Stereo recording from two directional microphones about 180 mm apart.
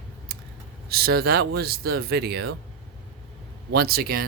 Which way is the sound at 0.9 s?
60° right (ahead or behind).